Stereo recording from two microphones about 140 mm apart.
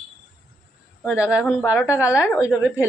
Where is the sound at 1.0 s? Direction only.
10° right (ahead or behind).